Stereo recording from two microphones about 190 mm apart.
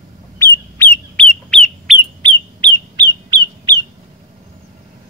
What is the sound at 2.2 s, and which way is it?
Bird, 25° right (ahead or behind).